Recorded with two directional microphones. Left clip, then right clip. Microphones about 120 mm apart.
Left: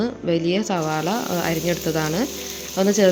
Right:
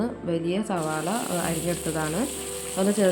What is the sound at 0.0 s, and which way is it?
Speech, 25° left (ahead or behind).